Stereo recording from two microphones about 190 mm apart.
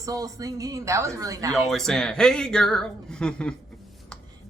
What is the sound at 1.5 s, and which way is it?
Speech, centre (ahead or behind).